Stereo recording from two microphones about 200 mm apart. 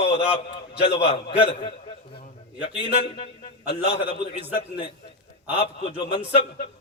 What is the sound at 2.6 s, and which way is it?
A man's voice, 30° left (ahead or behind).